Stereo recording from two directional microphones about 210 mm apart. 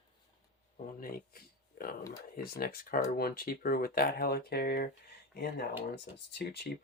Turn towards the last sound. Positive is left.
turn(degrees=50)  # may be behind; listen again after turning